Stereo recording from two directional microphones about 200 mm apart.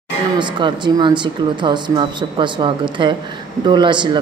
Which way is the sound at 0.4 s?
25° right (ahead or behind).